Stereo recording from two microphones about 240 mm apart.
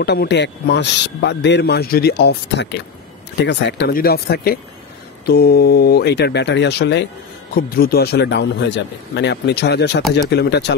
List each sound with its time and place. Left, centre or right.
0.0 s a man's voice: left